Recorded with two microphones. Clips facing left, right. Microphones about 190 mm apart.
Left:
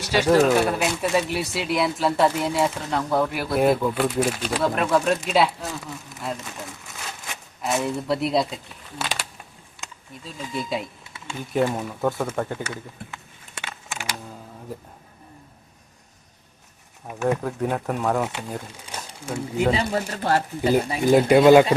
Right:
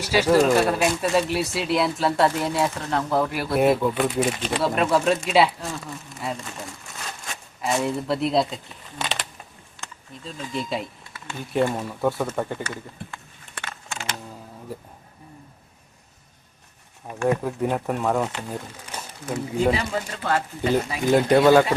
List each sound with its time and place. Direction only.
0.0 s speech: 5° right (ahead or behind)
0.3 s speech: 5° left (ahead or behind)
10.2 s speech: 5° left (ahead or behind)
13.6 s computer keyboard: 10° left (ahead or behind)
17.2 s speech: 5° right (ahead or behind); by 19.6 s 10° left (ahead or behind)
19.7 s speech: 35° left (ahead or behind)
21.1 s speech: 10° left (ahead or behind)